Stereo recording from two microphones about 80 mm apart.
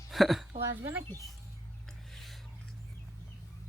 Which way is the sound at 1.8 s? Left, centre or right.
Centre.